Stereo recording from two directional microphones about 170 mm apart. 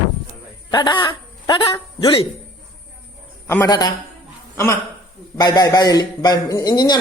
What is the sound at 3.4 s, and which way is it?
Speech, 15° left (ahead or behind).